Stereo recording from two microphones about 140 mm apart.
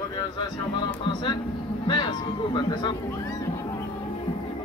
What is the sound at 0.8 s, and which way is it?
Speech, 35° left (ahead or behind).